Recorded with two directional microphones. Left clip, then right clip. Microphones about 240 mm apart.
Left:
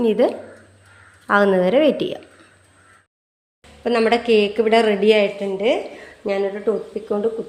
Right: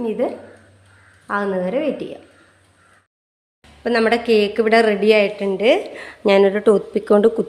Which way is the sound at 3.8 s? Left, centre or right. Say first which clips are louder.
Even; centre.